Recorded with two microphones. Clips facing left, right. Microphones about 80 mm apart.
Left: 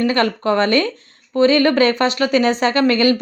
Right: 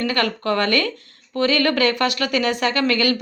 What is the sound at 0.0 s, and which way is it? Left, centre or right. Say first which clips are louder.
Speech: left 5 dB; left.